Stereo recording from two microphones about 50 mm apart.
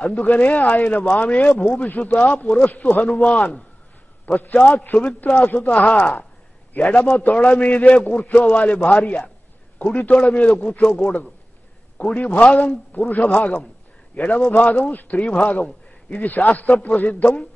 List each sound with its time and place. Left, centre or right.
0.0 s a man's voice: left